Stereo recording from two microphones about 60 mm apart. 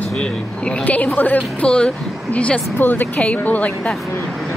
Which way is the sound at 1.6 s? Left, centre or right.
Centre.